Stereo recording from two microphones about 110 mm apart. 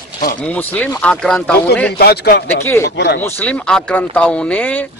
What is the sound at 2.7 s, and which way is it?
Speech, 25° left (ahead or behind).